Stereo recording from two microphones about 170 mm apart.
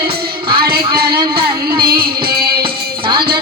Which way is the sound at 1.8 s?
65° right (ahead or behind).